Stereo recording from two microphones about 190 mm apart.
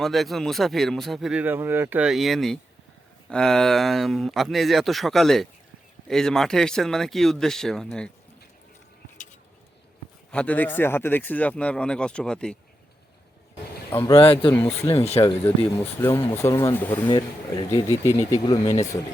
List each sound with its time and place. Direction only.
0.0 s speech: centre (ahead or behind)
10.3 s speech: 10° left (ahead or behind)
13.9 s speech: 15° left (ahead or behind)
14.2 s speech: 30° left (ahead or behind)
15.4 s speech: 10° left (ahead or behind)
17.1 s speech: 20° left (ahead or behind)